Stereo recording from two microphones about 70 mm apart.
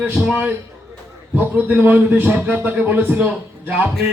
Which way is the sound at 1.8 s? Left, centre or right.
Right.